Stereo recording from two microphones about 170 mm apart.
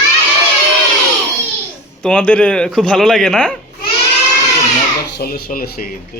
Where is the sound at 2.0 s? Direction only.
5° left (ahead or behind).